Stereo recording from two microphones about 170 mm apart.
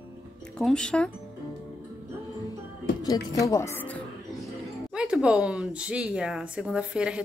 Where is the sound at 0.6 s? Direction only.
5° left (ahead or behind).